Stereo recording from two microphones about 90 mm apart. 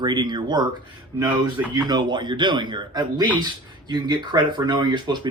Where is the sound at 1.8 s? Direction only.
55° right (ahead or behind).